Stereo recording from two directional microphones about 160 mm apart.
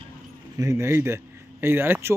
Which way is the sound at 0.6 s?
20° right (ahead or behind).